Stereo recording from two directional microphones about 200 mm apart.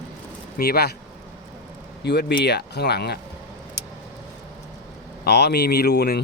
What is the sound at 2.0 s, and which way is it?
Speech, 55° left (ahead or behind).